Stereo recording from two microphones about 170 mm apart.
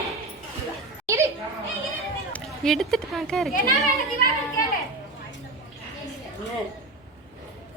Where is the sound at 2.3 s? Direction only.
Centre (ahead or behind).